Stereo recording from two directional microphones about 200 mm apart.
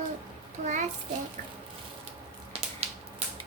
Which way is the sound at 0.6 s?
35° right (ahead or behind).